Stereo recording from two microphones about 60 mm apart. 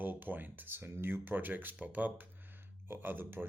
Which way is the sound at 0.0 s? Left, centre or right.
Right.